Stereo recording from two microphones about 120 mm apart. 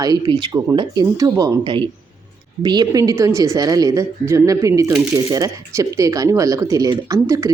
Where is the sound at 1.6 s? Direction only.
45° right (ahead or behind).